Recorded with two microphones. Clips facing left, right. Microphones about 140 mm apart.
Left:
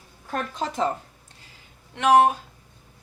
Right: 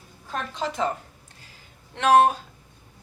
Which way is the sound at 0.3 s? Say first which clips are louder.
Left 1 dB; 40° left (ahead or behind).